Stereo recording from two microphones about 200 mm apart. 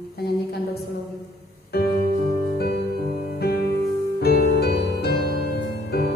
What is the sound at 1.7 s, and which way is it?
Music, 50° left (ahead or behind).